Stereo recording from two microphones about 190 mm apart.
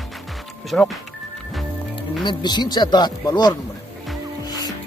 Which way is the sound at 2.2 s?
20° left (ahead or behind).